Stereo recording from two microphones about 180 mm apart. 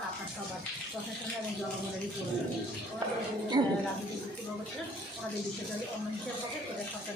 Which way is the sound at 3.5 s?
25° right (ahead or behind).